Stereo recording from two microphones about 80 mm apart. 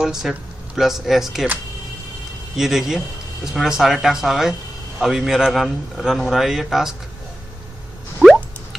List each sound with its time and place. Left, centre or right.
0.0 s speech: centre
2.5 s a man's voice: centre